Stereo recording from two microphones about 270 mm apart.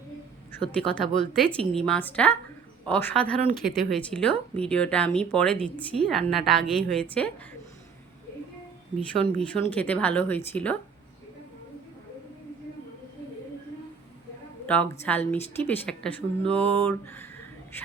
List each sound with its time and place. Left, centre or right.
0.5 s a woman's voice: centre
9.5 s a woman's voice: centre
14.7 s a woman's voice: centre
16.5 s a sound: centre